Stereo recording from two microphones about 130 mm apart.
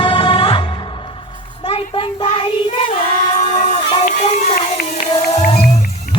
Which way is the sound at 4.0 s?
90° left.